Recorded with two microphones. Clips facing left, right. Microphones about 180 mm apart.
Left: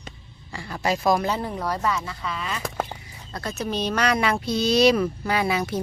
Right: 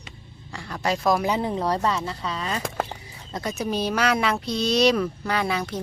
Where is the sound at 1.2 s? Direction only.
20° right (ahead or behind); by 2.6 s 35° right (ahead or behind).